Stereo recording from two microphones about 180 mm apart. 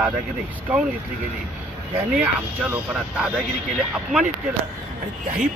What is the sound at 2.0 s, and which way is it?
Speech, 5° right (ahead or behind).